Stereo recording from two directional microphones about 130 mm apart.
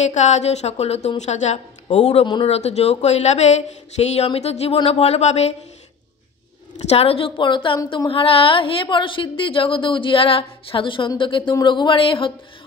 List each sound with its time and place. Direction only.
0.0 s speech: 65° left (ahead or behind)
6.8 s a woman's voice: 55° left (ahead or behind)